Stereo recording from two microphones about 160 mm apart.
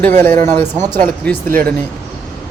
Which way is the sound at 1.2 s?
10° left (ahead or behind).